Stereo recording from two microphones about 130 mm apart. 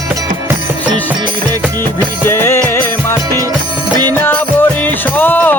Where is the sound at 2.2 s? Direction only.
15° left (ahead or behind).